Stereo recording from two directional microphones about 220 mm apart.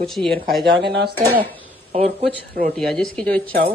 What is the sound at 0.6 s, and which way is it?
Speech, 50° right (ahead or behind).